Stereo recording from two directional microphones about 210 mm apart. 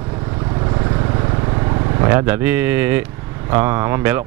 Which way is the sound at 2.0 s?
10° right (ahead or behind).